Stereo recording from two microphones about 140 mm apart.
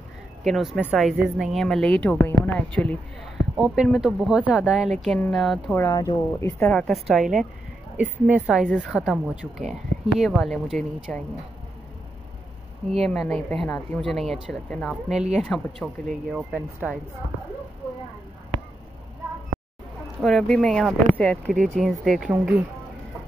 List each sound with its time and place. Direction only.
0.4 s a woman's voice: centre (ahead or behind)
3.5 s a woman's voice: 5° right (ahead or behind)
5.8 s speech: 25° left (ahead or behind)
6.7 s a woman's voice: 10° left (ahead or behind)
7.1 s a woman's voice: 5° right (ahead or behind)
8.6 s a woman's voice: 5° left (ahead or behind)
8.9 s a woman's voice: 5° right (ahead or behind)
13.0 s a woman's voice: centre (ahead or behind)
20.2 s a woman's voice: centre (ahead or behind)